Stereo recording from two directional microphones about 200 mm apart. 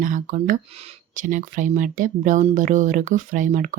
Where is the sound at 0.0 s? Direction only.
40° right (ahead or behind).